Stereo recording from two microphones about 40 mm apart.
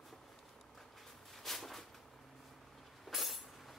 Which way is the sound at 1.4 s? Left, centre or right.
Centre.